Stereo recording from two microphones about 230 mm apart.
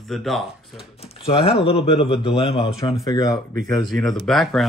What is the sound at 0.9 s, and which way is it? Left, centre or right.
Speech, left.